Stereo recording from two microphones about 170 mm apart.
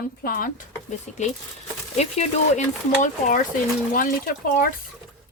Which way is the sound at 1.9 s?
40° left (ahead or behind).